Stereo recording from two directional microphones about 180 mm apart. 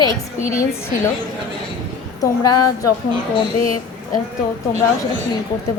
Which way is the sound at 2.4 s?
20° left (ahead or behind).